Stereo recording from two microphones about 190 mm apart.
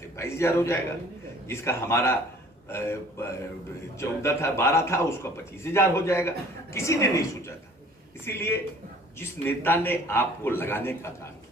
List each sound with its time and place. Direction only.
0.2 s a man's voice: 15° left (ahead or behind)
9.6 s a man's voice: 10° left (ahead or behind)